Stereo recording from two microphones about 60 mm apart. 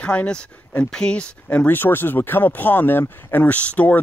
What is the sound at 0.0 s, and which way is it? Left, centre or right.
Speech, left.